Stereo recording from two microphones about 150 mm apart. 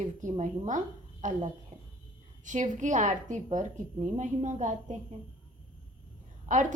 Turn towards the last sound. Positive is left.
turn(degrees=-55)  # may be behind; listen again after turning